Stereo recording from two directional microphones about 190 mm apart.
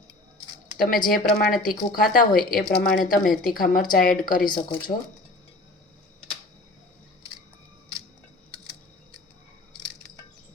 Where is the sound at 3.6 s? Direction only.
45° left (ahead or behind).